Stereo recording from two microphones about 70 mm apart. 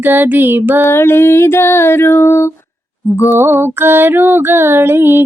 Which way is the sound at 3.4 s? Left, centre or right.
Right.